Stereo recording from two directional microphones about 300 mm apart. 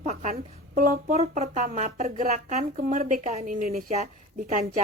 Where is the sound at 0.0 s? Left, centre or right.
Right.